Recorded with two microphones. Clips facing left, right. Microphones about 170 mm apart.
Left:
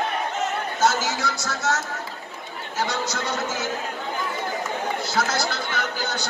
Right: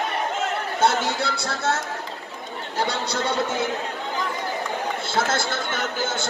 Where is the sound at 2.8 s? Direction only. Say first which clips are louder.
Right 1 dB; 30° right (ahead or behind).